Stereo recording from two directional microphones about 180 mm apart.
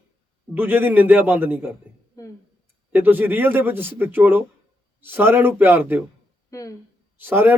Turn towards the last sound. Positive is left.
turn(degrees=-10)  # may be behind; listen again after turning